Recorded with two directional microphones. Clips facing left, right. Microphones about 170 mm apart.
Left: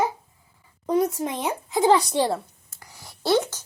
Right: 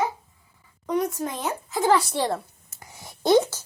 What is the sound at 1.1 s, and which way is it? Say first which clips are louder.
Speech: left 2 dB; 20° left (ahead or behind).